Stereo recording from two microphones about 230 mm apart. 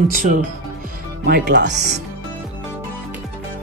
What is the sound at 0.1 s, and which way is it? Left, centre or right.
Speech, right.